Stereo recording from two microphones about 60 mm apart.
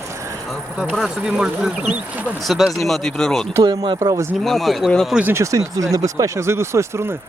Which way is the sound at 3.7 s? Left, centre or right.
Right.